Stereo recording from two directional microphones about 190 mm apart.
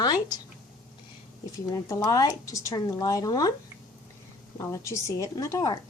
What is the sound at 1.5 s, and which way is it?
A woman's voice, 15° left (ahead or behind).